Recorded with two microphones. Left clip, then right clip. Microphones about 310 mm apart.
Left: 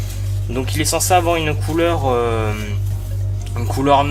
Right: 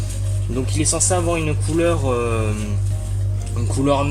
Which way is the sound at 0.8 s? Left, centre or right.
Left.